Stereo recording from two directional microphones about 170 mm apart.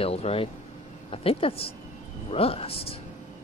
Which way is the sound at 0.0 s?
35° left (ahead or behind).